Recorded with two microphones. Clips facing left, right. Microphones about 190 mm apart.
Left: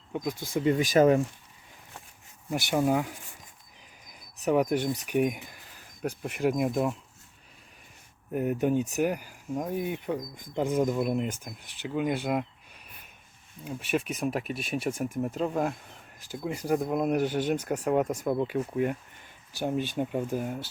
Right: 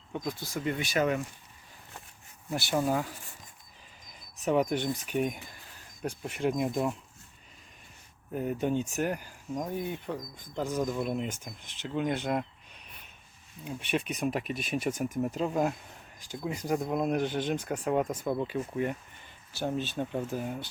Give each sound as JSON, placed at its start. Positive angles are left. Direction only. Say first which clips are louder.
{"t": 0.1, "sound": "speech", "louder": "left 3 dB", "side_deg": 15}
{"t": 0.5, "sound": "speech", "louder": "left 8 dB", "side_deg": 30}
{"t": 2.5, "sound": "speech", "louder": "left 3 dB", "side_deg": 15}
{"t": 4.4, "sound": "speech", "louder": "left 2 dB", "side_deg": 10}
{"t": 8.3, "sound": "speech", "louder": "left 4 dB", "side_deg": 5}
{"t": 10.9, "sound": "speech", "louder": "left 4 dB", "side_deg": 5}